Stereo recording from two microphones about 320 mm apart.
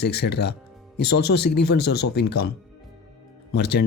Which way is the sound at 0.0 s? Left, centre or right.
Left.